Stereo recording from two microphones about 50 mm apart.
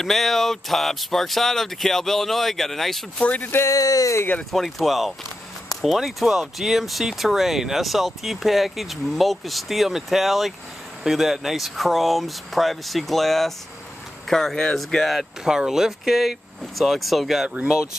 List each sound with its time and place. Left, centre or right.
0.0 s speech: centre
3.3 s speech: left
3.6 s speech: left
4.5 s speech: centre
15.0 s speech: centre
15.4 s speech: centre